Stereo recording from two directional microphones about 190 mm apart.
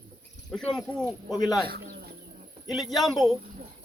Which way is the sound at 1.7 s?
55° right (ahead or behind).